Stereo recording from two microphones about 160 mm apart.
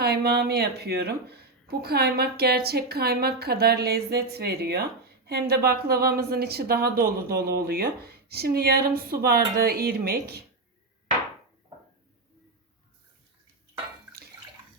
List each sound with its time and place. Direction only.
0.0 s speech: 80° right